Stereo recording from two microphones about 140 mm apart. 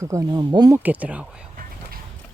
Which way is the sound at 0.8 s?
10° right (ahead or behind).